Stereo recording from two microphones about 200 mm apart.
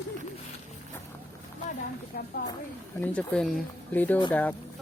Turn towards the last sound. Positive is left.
turn(degrees=10)  # may be behind; listen again after turning